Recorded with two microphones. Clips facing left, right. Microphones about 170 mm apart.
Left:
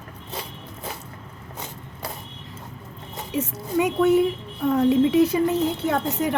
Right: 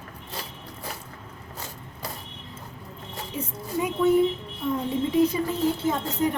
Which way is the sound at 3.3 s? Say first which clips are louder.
Left 6 dB; 75° left (ahead or behind).